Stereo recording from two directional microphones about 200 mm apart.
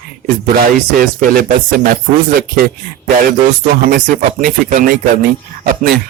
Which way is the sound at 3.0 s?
45° right (ahead or behind).